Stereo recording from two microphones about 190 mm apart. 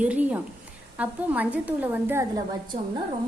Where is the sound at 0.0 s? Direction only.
5° right (ahead or behind).